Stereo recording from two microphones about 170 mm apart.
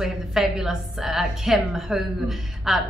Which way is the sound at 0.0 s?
Centre (ahead or behind).